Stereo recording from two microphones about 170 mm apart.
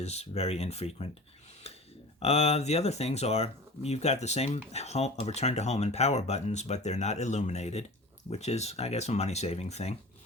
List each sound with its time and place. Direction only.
0.0 s speech: 40° left (ahead or behind)
2.1 s speech: 35° left (ahead or behind)